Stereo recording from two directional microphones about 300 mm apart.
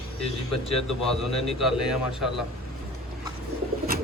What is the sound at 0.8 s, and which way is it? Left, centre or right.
Speech, centre.